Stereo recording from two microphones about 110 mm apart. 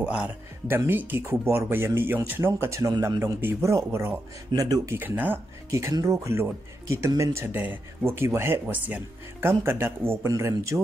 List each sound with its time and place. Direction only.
0.0 s speech: 10° right (ahead or behind)
0.7 s speech: 20° right (ahead or behind)
4.6 s speech: 35° right (ahead or behind)
4.9 s speech: 15° right (ahead or behind)
5.7 s speech: 30° right (ahead or behind)